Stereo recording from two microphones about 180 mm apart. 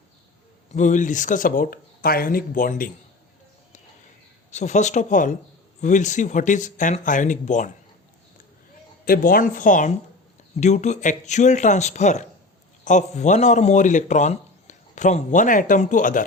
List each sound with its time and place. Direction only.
0.7 s speech: 45° left (ahead or behind)
4.5 s speech: 40° left (ahead or behind)
9.0 s a man's voice: 55° left (ahead or behind)